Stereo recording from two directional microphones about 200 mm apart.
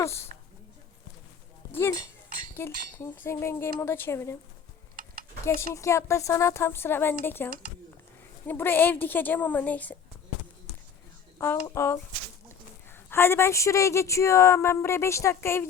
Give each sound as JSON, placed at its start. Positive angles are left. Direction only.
{"t": 0.0, "sound": "speech", "side_deg": 15}
{"t": 1.7, "sound": "speech", "side_deg": 10}
{"t": 5.0, "sound": "tick-tock", "side_deg": -45}
{"t": 5.5, "sound": "speech", "side_deg": 15}
{"t": 11.7, "sound": "speech", "side_deg": 15}